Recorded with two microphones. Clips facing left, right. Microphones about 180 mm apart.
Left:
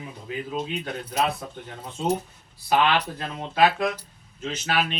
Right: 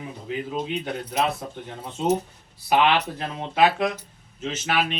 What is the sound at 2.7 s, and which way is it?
Speech, 20° right (ahead or behind).